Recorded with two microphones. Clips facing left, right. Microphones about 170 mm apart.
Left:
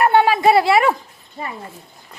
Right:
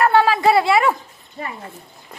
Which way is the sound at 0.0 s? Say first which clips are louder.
Left 1 dB; 20° left (ahead or behind).